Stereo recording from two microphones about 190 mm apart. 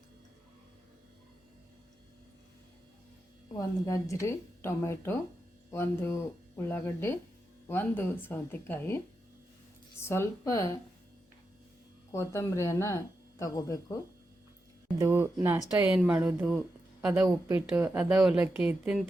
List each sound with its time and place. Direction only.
3.5 s a woman's voice: 20° left (ahead or behind)
10.0 s a woman's voice: 15° left (ahead or behind)
12.1 s a woman's voice: 15° left (ahead or behind)
14.9 s a woman's voice: 10° right (ahead or behind)